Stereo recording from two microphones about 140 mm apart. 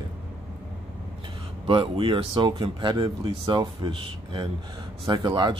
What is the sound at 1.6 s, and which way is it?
Speech, 35° right (ahead or behind).